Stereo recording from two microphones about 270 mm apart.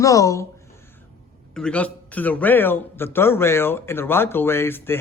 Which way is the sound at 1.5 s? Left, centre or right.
Centre.